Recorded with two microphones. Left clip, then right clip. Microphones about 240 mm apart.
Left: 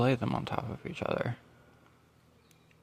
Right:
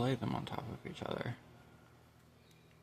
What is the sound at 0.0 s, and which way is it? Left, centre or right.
Speech, left.